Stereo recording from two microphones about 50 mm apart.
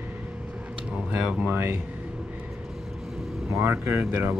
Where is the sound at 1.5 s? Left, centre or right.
Right.